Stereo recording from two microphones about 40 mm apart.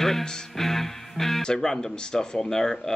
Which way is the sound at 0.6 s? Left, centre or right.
Centre.